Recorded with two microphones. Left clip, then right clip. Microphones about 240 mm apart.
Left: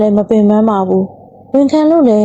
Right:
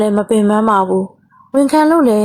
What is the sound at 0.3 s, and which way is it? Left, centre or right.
A woman's voice, centre.